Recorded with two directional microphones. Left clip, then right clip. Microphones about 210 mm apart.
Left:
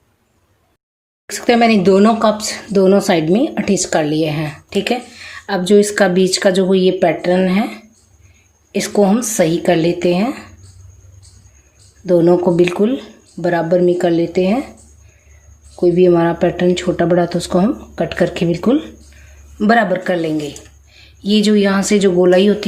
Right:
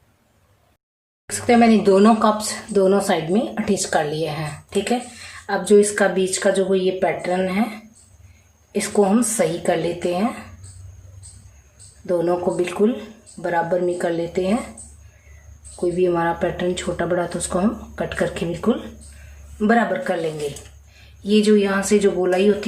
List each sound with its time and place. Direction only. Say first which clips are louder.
1.3 s speech: left 3 dB; 40° left (ahead or behind)
8.7 s speech: left 4 dB; 40° left (ahead or behind)
12.0 s speech: left 8 dB; 40° left (ahead or behind)
15.7 s speech: left 8 dB; 35° left (ahead or behind)